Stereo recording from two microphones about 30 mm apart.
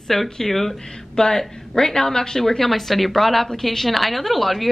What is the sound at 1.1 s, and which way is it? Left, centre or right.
A woman's voice, left.